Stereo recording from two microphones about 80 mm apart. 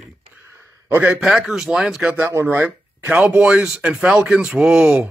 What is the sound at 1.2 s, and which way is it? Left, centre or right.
Speech, centre.